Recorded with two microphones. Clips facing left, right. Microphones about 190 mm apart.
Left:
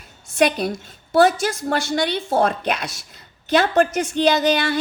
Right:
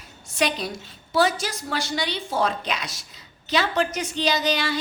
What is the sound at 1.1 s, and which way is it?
A woman's voice, 55° left (ahead or behind).